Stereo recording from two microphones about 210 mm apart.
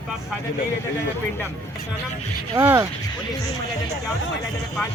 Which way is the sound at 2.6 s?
10° right (ahead or behind).